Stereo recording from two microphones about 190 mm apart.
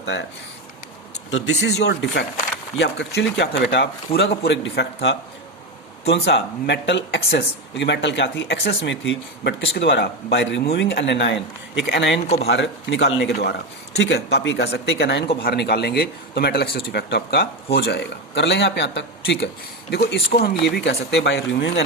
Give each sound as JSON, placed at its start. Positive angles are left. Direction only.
{"t": 0.0, "sound": "speech", "side_deg": 70}
{"t": 1.3, "sound": "speech", "side_deg": 80}
{"t": 6.2, "sound": "speech", "side_deg": 65}
{"t": 11.3, "sound": "speech", "side_deg": -5}
{"t": 11.9, "sound": "speech", "side_deg": 70}